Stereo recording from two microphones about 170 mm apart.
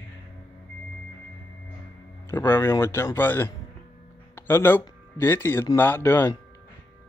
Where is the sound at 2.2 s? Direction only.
15° left (ahead or behind).